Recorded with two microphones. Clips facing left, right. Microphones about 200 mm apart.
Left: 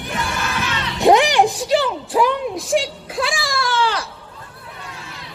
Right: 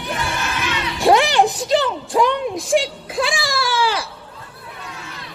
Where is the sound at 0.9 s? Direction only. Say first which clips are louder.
Left 1 dB; 20° left (ahead or behind); by 4.1 s 10° right (ahead or behind).